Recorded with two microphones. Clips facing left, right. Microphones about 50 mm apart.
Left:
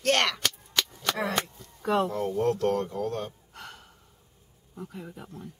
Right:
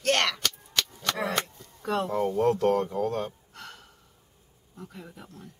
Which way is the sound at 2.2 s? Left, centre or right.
Centre.